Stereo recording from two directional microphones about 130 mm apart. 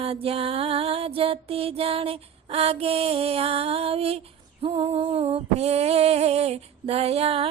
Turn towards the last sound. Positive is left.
turn(degrees=-50)  # may be behind; listen again after turning